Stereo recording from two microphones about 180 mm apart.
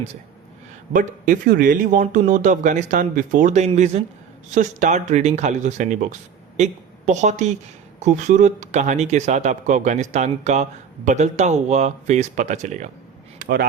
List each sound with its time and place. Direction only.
0.9 s a woman's voice: 45° right (ahead or behind)
13.4 s speech: 55° right (ahead or behind)